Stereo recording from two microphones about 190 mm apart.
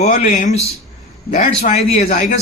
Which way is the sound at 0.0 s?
40° left (ahead or behind).